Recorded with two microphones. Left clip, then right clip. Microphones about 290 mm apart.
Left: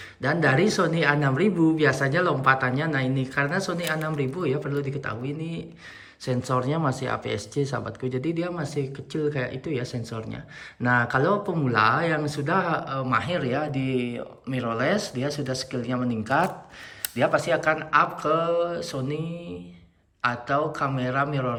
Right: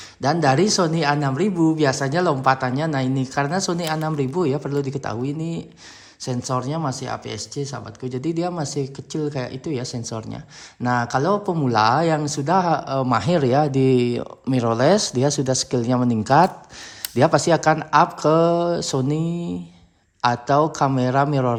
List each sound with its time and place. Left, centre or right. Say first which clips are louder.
0.2 s speech: right 4 dB; centre